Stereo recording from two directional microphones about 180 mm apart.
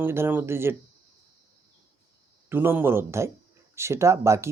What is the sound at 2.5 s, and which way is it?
Speech, 10° right (ahead or behind).